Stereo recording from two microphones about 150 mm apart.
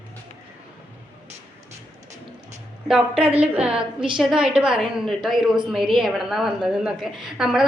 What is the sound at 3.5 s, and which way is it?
A woman's voice, 5° right (ahead or behind).